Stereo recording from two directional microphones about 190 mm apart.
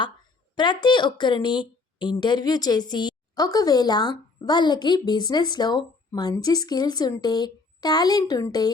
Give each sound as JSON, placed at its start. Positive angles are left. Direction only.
{"t": 0.5, "sound": "a woman's voice", "side_deg": 25}